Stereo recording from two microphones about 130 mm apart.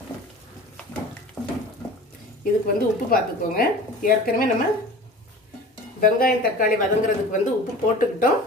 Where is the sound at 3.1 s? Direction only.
90° left.